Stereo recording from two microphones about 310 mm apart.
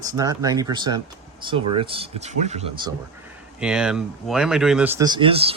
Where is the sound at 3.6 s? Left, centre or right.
Centre.